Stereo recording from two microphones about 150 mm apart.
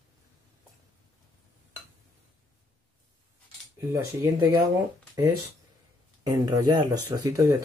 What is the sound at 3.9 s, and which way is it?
Speech, 20° right (ahead or behind).